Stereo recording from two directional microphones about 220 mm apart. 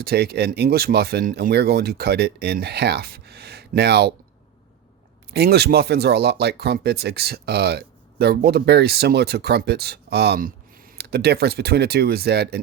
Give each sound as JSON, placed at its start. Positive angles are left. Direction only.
{"t": 0.0, "sound": "speech", "side_deg": -45}
{"t": 5.3, "sound": "speech", "side_deg": -45}